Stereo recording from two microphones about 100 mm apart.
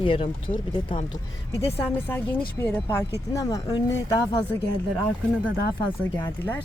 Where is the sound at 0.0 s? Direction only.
65° left (ahead or behind).